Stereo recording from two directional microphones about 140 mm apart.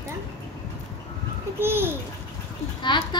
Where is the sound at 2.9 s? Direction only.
35° left (ahead or behind).